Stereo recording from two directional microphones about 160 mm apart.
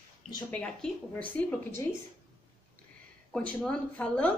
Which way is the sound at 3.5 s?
5° left (ahead or behind).